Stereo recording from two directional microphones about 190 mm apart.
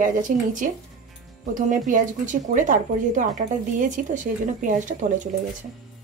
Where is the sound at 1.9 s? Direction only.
45° right (ahead or behind).